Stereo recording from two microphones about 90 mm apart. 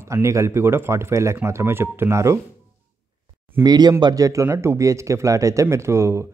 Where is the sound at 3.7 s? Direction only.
50° right (ahead or behind).